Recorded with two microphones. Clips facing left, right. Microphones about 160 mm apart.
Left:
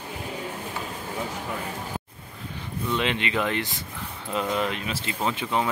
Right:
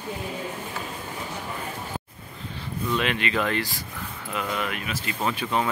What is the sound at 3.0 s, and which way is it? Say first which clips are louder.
Speech: even; 20° left (ahead or behind).